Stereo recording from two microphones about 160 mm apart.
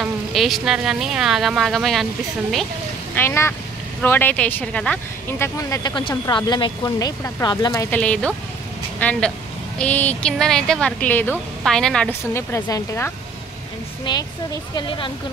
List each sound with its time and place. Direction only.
0.0 s speech: centre (ahead or behind)
3.2 s speech: 15° left (ahead or behind)
5.6 s speech: 25° left (ahead or behind)
8.0 s speech: 5° left (ahead or behind)
12.4 s speech: 20° left (ahead or behind)